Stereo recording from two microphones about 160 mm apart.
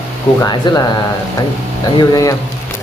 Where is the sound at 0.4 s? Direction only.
25° left (ahead or behind).